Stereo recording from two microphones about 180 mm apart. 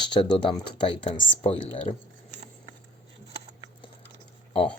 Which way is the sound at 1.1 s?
90° left.